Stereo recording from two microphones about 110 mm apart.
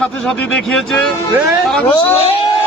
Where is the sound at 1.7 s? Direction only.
15° left (ahead or behind).